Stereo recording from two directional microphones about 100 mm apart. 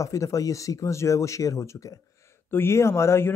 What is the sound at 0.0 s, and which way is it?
A man's voice, 30° left (ahead or behind).